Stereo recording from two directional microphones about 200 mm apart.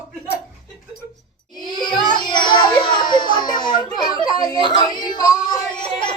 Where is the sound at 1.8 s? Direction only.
20° left (ahead or behind).